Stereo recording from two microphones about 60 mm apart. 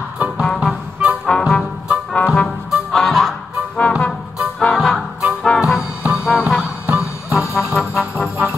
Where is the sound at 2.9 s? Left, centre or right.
Centre.